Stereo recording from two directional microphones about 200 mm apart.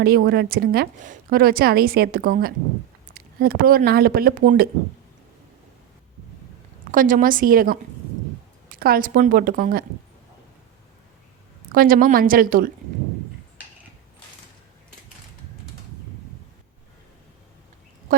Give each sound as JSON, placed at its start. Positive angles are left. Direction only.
{"t": 0.0, "sound": "a woman's voice", "side_deg": -50}
{"t": 6.9, "sound": "a woman's voice", "side_deg": -45}
{"t": 11.7, "sound": "a woman's voice", "side_deg": -45}
{"t": 18.1, "sound": "speech", "side_deg": -45}